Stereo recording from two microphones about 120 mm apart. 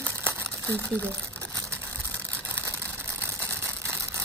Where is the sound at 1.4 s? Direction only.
20° right (ahead or behind).